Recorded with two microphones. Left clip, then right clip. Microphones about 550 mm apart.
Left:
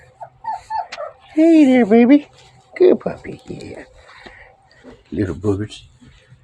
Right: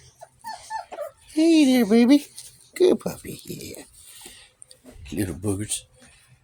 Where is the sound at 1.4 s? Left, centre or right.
Right.